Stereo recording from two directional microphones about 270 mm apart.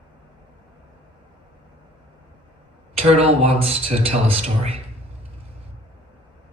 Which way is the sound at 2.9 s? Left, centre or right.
Right.